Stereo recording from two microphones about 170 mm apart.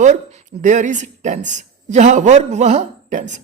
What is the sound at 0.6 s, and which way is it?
Speech, 45° right (ahead or behind).